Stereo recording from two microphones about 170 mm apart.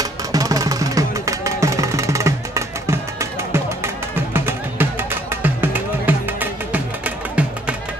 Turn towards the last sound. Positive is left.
turn(degrees=-10)  # may be behind; listen again after turning